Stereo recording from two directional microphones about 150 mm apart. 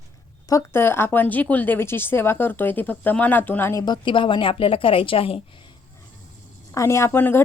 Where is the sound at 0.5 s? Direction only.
15° left (ahead or behind).